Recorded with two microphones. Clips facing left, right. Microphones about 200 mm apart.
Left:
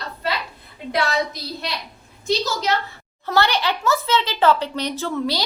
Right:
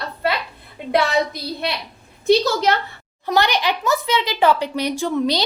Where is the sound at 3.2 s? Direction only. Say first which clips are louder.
Right 1 dB; 15° right (ahead or behind).